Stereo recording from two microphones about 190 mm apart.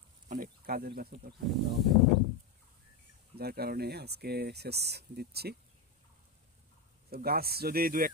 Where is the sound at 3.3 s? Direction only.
55° right (ahead or behind).